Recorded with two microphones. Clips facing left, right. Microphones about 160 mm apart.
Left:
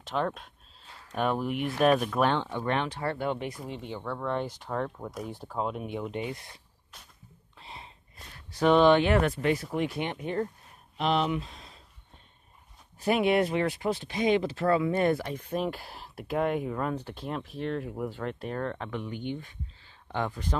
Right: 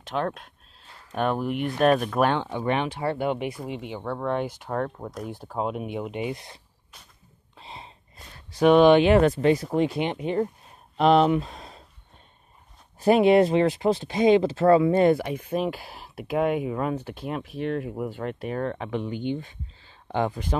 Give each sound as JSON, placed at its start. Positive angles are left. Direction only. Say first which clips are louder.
{"t": 0.0, "sound": "speech", "louder": "right 2 dB", "side_deg": 0}
{"t": 5.6, "sound": "speech", "louder": "right 3 dB", "side_deg": -15}
{"t": 7.5, "sound": "a sound", "louder": "right 4 dB", "side_deg": -25}
{"t": 8.5, "sound": "speech", "louder": "right 5 dB", "side_deg": -15}
{"t": 11.0, "sound": "speech", "louder": "right 8 dB", "side_deg": -45}
{"t": 13.0, "sound": "speech", "louder": "right 7 dB", "side_deg": -30}
{"t": 15.0, "sound": "speech", "louder": "right 6 dB", "side_deg": -15}
{"t": 15.5, "sound": "speech", "louder": "right 3 dB", "side_deg": -5}
{"t": 18.9, "sound": "speech", "louder": "right 6 dB", "side_deg": -20}